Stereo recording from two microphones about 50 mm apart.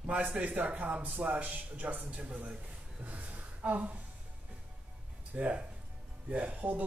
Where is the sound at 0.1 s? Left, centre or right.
Right.